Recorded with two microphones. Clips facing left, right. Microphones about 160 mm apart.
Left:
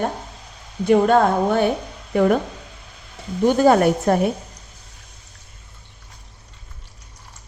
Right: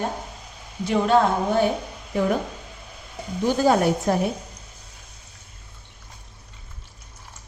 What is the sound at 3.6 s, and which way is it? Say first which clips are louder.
Speech: left 4 dB; 60° left (ahead or behind).